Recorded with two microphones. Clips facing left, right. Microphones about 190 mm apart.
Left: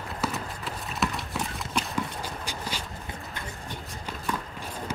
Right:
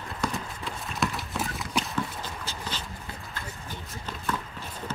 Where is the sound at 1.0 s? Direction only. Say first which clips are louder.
Even; centre (ahead or behind).